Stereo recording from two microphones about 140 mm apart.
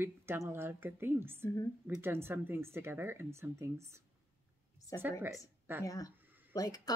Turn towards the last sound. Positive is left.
turn(degrees=25)  # may be behind; listen again after turning